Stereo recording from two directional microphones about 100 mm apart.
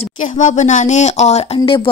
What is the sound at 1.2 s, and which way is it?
Speech, 80° left.